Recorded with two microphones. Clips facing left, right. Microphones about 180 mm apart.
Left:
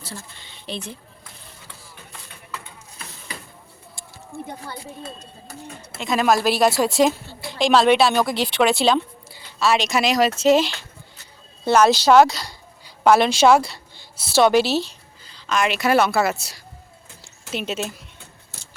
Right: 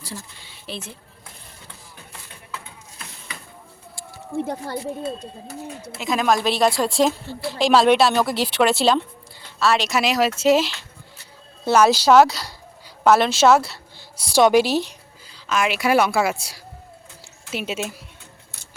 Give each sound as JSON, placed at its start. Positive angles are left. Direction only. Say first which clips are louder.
{"t": 0.0, "sound": "a sound", "louder": "right 1 dB", "side_deg": -10}
{"t": 4.4, "sound": "speech", "louder": "right 8 dB", "side_deg": -75}
{"t": 6.0, "sound": "speech", "louder": "left 1 dB", "side_deg": 0}